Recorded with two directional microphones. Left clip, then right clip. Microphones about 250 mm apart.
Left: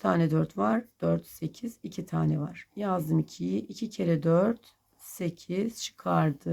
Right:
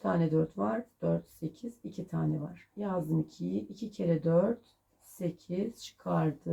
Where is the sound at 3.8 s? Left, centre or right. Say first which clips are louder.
Left 5 dB; left.